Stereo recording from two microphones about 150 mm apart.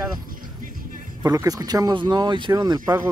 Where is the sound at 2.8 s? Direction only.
15° right (ahead or behind).